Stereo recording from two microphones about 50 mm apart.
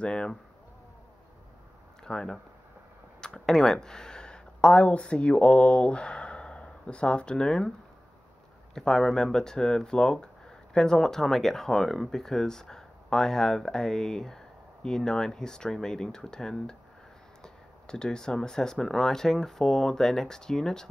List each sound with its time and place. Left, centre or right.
0.0 s speech: centre
2.0 s speech: centre
8.7 s speech: centre